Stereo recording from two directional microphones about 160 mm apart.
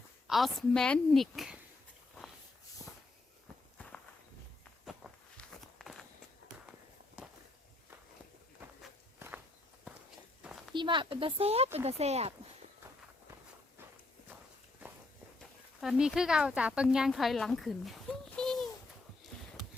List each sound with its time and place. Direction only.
0.3 s a woman's voice: centre (ahead or behind)
3.8 s walk: 5° left (ahead or behind)
9.1 s walk: 15° right (ahead or behind)
10.4 s a sound: centre (ahead or behind)
10.8 s speech: 30° right (ahead or behind)
15.8 s speech: 5° right (ahead or behind)